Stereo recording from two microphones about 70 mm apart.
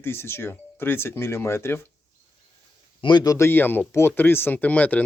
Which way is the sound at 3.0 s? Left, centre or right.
Left.